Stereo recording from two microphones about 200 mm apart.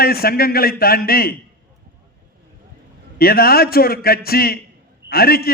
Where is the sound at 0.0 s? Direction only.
50° left (ahead or behind).